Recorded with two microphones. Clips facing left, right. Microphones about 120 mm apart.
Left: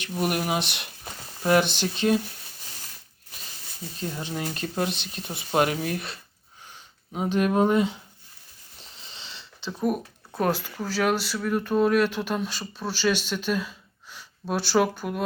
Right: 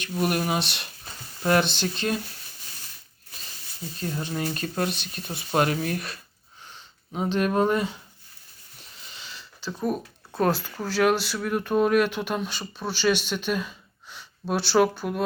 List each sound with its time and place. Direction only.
0.0 s speech: 15° left (ahead or behind)
4.0 s speech: 15° left (ahead or behind)
8.8 s a sound: 30° left (ahead or behind)
9.8 s speech: 10° left (ahead or behind)